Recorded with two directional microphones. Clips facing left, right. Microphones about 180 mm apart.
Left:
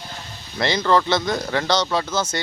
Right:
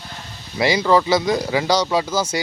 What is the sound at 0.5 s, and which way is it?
Speech, 10° right (ahead or behind).